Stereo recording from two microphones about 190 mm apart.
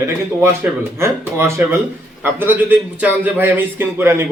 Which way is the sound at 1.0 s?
15° right (ahead or behind).